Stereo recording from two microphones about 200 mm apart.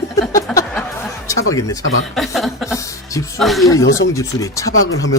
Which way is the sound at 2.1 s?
Centre (ahead or behind).